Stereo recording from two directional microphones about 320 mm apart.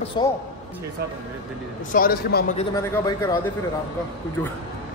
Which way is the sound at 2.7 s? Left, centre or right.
Centre.